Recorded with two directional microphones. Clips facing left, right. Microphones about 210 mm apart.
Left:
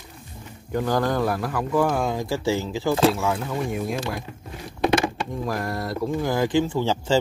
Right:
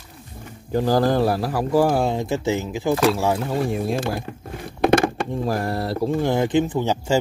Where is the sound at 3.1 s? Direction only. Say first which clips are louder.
Right 4 dB; 30° right (ahead or behind).